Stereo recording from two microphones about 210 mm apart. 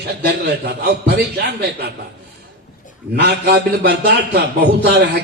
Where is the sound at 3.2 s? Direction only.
50° right (ahead or behind).